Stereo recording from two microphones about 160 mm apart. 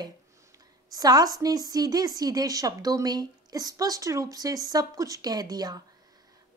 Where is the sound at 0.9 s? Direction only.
25° right (ahead or behind).